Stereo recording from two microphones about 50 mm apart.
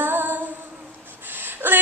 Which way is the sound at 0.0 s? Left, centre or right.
Right.